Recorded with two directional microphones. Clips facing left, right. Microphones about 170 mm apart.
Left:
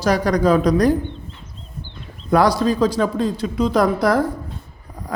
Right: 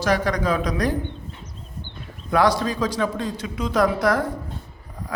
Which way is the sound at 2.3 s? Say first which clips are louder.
Left 4 dB; 35° left (ahead or behind).